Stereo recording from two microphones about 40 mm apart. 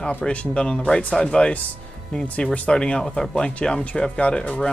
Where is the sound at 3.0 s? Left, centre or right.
Centre; by 4.5 s left.